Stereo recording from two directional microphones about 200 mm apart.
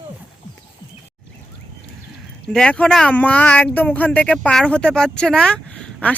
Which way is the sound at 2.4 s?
5° left (ahead or behind).